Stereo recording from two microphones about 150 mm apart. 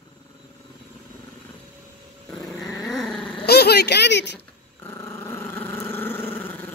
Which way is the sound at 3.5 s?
90° left.